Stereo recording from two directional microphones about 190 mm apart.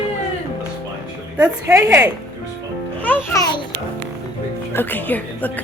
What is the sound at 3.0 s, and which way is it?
Speech, 10° left (ahead or behind).